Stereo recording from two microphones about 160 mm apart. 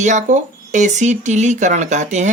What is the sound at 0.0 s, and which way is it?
Speech, 50° right (ahead or behind).